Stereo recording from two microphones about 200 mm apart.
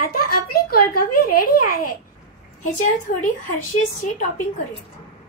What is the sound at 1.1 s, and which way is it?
A child's voice, 45° left (ahead or behind).